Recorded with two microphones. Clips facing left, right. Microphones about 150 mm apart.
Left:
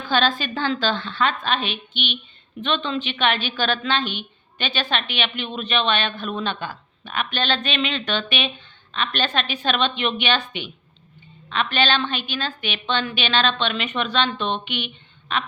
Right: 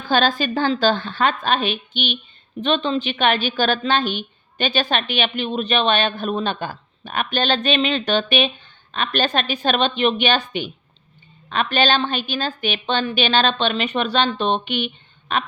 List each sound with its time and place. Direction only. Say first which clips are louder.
0.1 s speech: right 3 dB; 40° right (ahead or behind)